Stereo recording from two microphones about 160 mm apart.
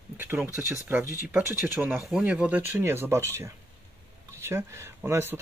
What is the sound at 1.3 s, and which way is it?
Speech, 10° right (ahead or behind).